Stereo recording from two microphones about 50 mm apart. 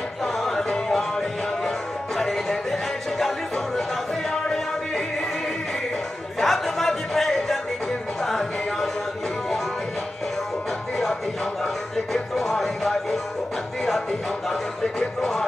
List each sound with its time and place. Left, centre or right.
0.2 s music: centre
6.4 s chatter: centre
8.2 s a sound: centre
11.6 s music: centre
14.5 s speech: centre